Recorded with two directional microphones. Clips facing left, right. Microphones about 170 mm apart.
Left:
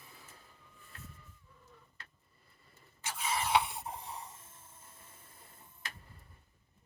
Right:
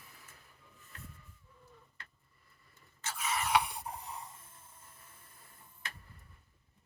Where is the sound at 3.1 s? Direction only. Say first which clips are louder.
Even; 30° left (ahead or behind).